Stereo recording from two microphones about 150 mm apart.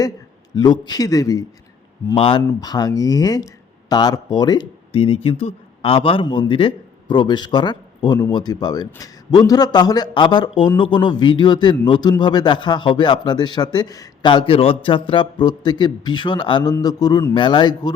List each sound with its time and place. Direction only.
0.5 s speech: 25° left (ahead or behind)
2.1 s speech: 35° left (ahead or behind)
2.4 s speech: 20° left (ahead or behind)